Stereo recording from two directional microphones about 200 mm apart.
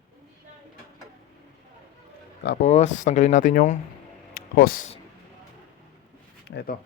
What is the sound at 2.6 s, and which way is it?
Speech, 35° left (ahead or behind).